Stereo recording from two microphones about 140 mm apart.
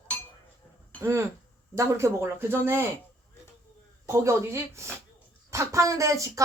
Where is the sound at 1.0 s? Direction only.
20° right (ahead or behind).